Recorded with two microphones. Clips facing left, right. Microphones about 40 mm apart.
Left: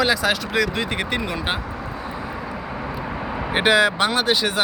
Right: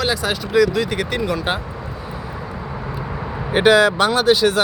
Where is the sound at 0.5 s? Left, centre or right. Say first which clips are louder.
Right 5 dB; left.